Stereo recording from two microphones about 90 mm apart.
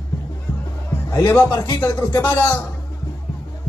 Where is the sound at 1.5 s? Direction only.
45° left (ahead or behind).